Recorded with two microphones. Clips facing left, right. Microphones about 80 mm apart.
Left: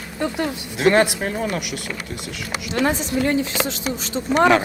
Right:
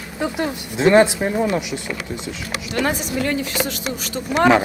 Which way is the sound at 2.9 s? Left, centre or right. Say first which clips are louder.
Left 2 dB; right.